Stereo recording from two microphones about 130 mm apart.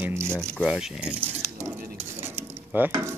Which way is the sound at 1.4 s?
20° right (ahead or behind).